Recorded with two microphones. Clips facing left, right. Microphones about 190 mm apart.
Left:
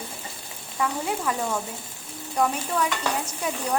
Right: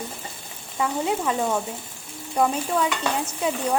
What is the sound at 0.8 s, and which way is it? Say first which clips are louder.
Speech: right 3 dB; 25° right (ahead or behind).